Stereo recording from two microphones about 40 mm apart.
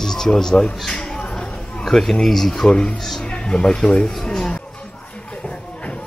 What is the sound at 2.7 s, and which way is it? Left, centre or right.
Speech, left.